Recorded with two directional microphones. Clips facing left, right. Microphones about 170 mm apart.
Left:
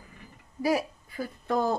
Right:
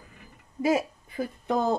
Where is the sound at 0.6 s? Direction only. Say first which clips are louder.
Right 2 dB; 20° right (ahead or behind).